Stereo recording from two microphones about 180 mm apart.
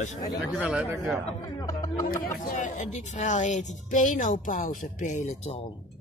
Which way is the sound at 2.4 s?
45° left (ahead or behind).